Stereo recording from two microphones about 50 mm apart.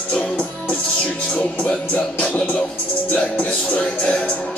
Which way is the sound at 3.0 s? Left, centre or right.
Left.